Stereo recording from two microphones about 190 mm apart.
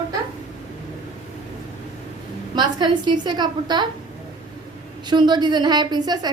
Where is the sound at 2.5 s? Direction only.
20° right (ahead or behind).